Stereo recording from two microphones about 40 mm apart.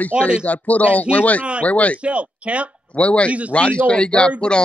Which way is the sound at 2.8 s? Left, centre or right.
Left.